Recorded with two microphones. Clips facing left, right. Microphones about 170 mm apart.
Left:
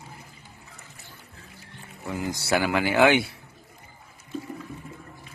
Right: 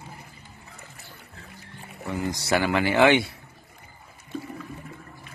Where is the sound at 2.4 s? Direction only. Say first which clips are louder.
Even; 5° left (ahead or behind).